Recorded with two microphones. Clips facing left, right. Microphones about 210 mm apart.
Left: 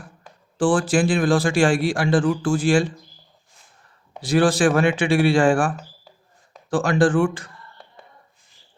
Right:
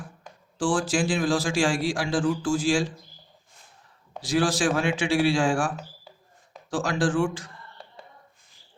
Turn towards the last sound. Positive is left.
turn(degrees=60)  # may be behind; listen again after turning